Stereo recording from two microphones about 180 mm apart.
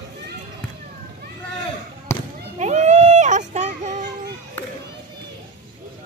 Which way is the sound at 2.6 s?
40° right (ahead or behind).